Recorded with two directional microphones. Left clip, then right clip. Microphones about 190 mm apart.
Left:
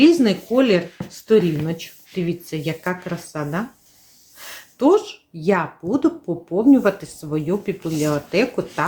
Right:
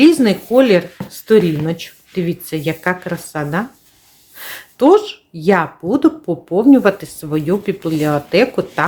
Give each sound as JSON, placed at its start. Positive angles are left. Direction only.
{"t": 0.0, "sound": "a woman's voice", "side_deg": -15}